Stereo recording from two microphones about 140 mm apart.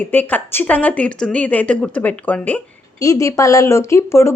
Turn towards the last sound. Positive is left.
turn(degrees=20)  # may be behind; listen again after turning